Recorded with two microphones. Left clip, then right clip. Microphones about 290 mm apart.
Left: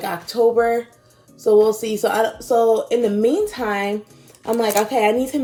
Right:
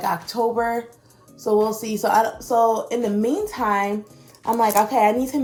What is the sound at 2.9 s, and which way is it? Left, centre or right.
Speech, centre.